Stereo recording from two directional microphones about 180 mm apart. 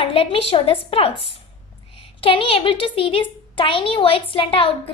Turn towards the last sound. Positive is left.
turn(degrees=30)  # may be behind; listen again after turning